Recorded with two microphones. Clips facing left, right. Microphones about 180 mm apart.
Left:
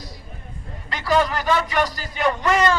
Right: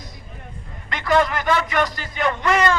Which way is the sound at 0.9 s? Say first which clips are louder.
Right 1 dB; 35° left (ahead or behind).